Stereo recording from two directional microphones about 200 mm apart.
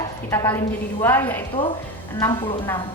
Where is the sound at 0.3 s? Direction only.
10° left (ahead or behind).